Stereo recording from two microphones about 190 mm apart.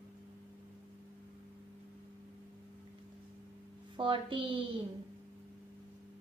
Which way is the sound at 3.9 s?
25° right (ahead or behind).